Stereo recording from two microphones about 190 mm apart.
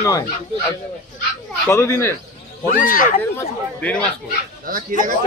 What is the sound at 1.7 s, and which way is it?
Speech, 15° left (ahead or behind).